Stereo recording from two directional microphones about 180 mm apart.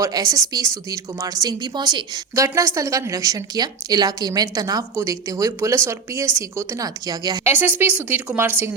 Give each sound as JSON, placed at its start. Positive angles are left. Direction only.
{"t": 0.0, "sound": "a woman's voice", "side_deg": -20}
{"t": 7.5, "sound": "speech", "side_deg": -10}